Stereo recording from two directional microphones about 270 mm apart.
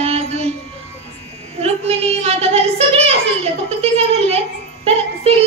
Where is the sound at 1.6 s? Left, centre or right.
Right.